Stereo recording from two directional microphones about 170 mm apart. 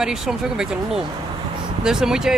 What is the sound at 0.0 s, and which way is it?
Speech, 5° right (ahead or behind).